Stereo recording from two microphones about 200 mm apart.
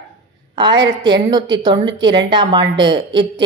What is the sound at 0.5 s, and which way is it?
A woman's voice, 20° right (ahead or behind).